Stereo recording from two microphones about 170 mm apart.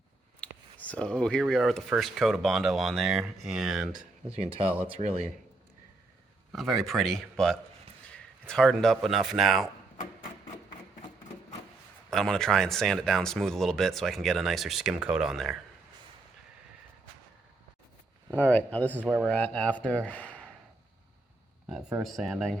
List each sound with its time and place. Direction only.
0.3 s speech: 5° left (ahead or behind)
4.4 s speech: 35° right (ahead or behind)
6.5 s speech: centre (ahead or behind)
12.1 s speech: 5° left (ahead or behind)
18.3 s speech: 10° left (ahead or behind)
18.9 s speech: 5° right (ahead or behind)
19.3 s speech: 5° left (ahead or behind)
22.0 s speech: centre (ahead or behind)